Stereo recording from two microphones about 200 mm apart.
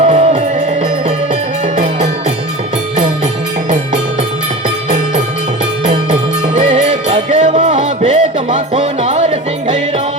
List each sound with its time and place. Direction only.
0.0 s music: 30° right (ahead or behind)
5.8 s music: 35° right (ahead or behind)